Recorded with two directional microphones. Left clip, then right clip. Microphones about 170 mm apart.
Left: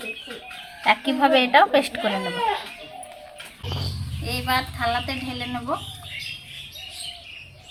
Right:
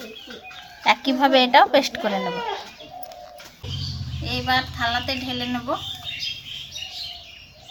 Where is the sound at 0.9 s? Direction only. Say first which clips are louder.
Right 1 dB; 15° right (ahead or behind).